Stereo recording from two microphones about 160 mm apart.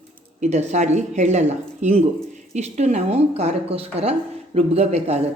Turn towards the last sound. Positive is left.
turn(degrees=-40)  # may be behind; listen again after turning